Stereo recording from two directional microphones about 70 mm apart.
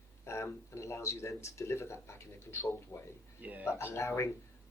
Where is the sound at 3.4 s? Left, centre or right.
Right.